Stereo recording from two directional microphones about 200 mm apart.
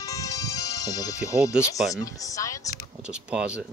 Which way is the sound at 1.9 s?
15° left (ahead or behind).